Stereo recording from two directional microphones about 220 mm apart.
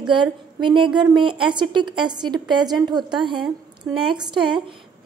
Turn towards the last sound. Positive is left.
turn(degrees=-20)  # may be behind; listen again after turning